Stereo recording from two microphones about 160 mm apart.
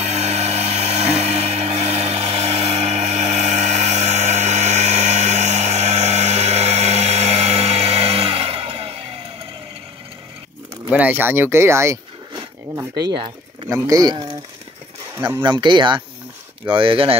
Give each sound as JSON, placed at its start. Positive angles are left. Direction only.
{"t": 0.0, "sound": "a sound", "side_deg": -45}
{"t": 10.9, "sound": "speech", "side_deg": -10}
{"t": 15.1, "sound": "speech", "side_deg": -15}
{"t": 15.4, "sound": "speech", "side_deg": -30}